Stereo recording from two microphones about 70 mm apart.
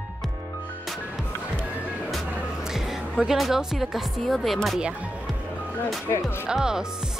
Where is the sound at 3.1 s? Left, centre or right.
Centre.